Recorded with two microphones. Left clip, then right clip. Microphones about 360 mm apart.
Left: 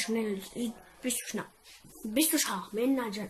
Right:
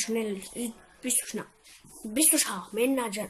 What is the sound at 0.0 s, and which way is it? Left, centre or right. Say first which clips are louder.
Speech: right 2 dB; centre.